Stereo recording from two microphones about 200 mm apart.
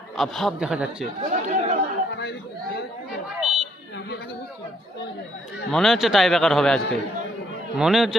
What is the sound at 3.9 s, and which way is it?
Chatter, 55° left (ahead or behind).